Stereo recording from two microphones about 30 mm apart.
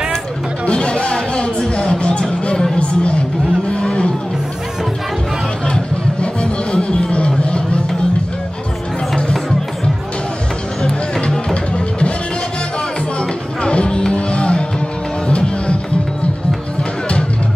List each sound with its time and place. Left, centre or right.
0.7 s music: left
2.8 s speech: left
3.7 s a sound: left
6.2 s music: left
9.1 s music: centre
10.8 s music: left
11.5 s music: left
13.2 s music: left